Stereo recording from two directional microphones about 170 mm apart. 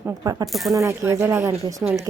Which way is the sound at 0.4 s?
Centre (ahead or behind).